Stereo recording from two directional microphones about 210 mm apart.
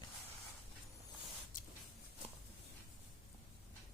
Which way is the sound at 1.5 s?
40° left (ahead or behind).